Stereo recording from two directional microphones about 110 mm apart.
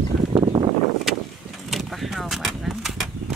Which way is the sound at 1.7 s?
Centre (ahead or behind).